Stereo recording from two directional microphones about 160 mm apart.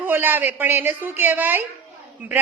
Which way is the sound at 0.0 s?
10° right (ahead or behind).